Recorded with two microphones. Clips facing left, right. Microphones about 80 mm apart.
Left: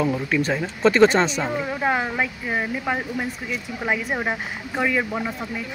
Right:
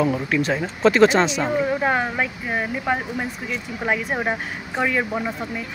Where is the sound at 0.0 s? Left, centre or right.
Centre.